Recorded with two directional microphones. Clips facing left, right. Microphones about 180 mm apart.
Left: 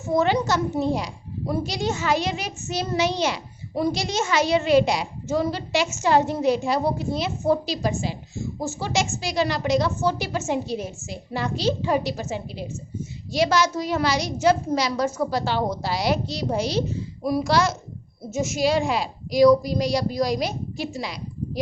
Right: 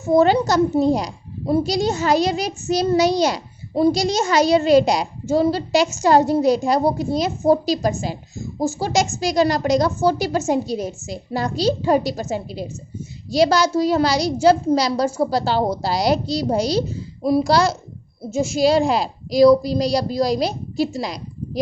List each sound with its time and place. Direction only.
0.1 s a child's voice: 35° right (ahead or behind)